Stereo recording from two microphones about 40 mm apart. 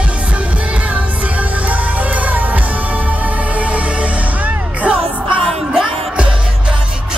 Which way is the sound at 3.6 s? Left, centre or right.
Right.